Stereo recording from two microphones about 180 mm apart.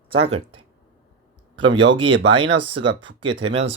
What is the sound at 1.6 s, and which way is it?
Speech, 90° right.